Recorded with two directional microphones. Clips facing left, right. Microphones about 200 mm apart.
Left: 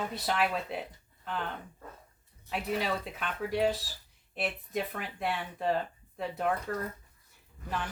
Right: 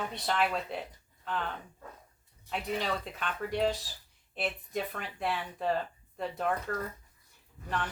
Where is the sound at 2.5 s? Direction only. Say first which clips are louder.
Left 1 dB; 5° left (ahead or behind).